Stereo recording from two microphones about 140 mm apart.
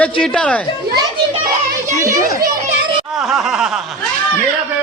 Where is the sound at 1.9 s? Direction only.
20° right (ahead or behind).